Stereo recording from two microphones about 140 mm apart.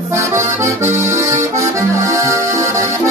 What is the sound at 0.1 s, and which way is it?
Accordion, 20° right (ahead or behind).